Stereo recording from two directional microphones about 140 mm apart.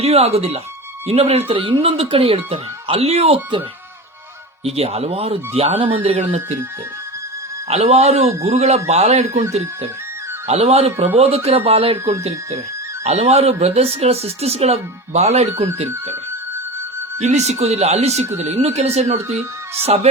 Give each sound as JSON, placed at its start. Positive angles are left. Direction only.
{"t": 0.0, "sound": "speech", "side_deg": -45}
{"t": 4.6, "sound": "speech", "side_deg": -45}
{"t": 7.7, "sound": "speech", "side_deg": -50}
{"t": 17.2, "sound": "speech", "side_deg": -55}